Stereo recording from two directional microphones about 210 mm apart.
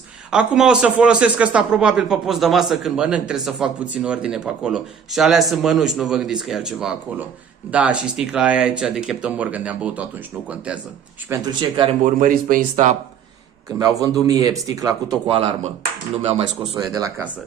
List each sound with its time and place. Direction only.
0.3 s speech: 5° right (ahead or behind)
11.3 s speech: 10° right (ahead or behind)
11.7 s speech: 25° right (ahead or behind)
12.0 s speech: 40° right (ahead or behind)
13.7 s speech: 15° right (ahead or behind)
15.2 s speech: 25° right (ahead or behind)
16.7 s speech: 15° right (ahead or behind)